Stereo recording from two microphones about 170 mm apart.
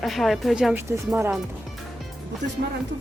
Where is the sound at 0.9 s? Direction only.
15° right (ahead or behind).